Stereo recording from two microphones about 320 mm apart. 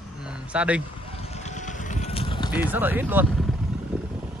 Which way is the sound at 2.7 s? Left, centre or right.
Centre.